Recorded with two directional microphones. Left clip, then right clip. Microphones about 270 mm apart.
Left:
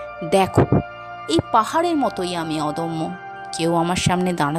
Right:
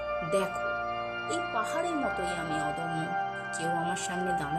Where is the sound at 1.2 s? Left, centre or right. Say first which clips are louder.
Left 15 dB; left.